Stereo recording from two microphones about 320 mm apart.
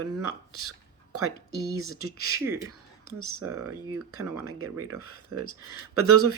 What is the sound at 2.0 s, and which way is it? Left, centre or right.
Speech, right.